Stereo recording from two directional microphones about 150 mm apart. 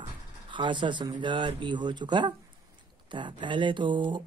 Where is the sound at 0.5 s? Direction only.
30° right (ahead or behind).